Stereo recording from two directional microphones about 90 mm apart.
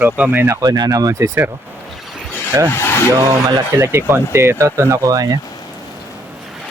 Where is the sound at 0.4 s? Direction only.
40° right (ahead or behind).